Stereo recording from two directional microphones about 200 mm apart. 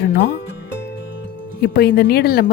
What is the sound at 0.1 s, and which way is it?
Speech, 60° left (ahead or behind).